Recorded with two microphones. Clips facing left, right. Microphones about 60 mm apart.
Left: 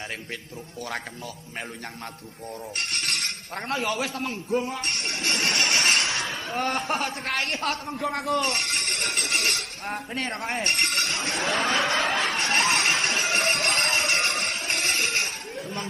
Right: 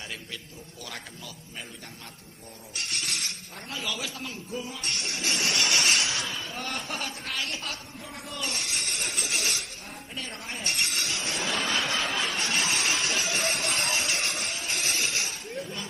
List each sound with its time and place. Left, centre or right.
2.7 s a man's voice: left
8.1 s speech: left
8.4 s speech: left
12.1 s music: left